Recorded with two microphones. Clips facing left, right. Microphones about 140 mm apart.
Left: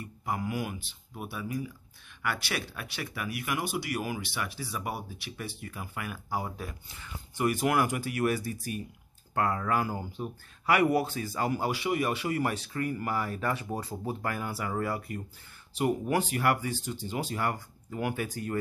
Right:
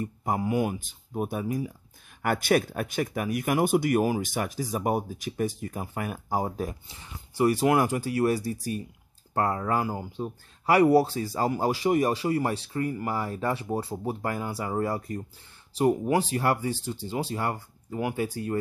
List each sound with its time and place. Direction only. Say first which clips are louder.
0.0 s speech: right 6 dB; 45° right (ahead or behind)
0.4 s speech: right 10 dB; 30° right (ahead or behind)
0.7 s speech: right 10 dB; 40° right (ahead or behind); by 10.3 s 20° right (ahead or behind)
10.6 s speech: right 6 dB; 30° right (ahead or behind)